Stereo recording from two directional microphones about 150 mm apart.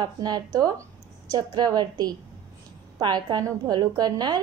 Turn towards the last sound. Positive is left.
turn(degrees=-25)  # may be behind; listen again after turning